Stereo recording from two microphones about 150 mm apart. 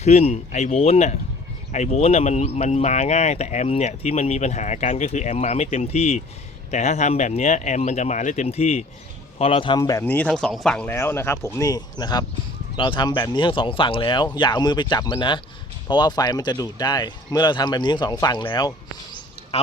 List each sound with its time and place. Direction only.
0.0 s speech: 45° left (ahead or behind); by 10.0 s 25° left (ahead or behind)
10.0 s speech: 10° left (ahead or behind); by 18.7 s 30° left (ahead or behind)
19.5 s speech: 45° left (ahead or behind)